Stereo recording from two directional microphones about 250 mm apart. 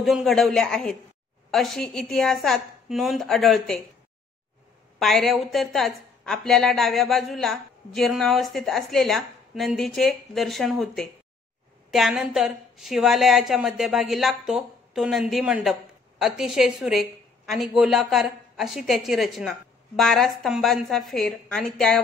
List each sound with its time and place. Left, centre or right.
0.0 s a woman's voice: centre
4.9 s a woman's voice: centre